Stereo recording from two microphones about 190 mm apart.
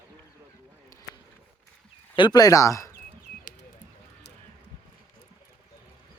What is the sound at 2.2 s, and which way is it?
Speech, 20° left (ahead or behind).